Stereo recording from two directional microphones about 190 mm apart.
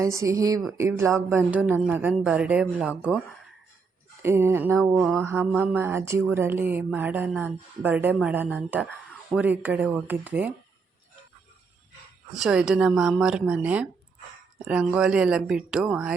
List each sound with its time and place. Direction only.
0.0 s speech: 15° right (ahead or behind)
4.2 s speech: 15° right (ahead or behind)
4.9 s speech: centre (ahead or behind)
12.4 s speech: 5° right (ahead or behind)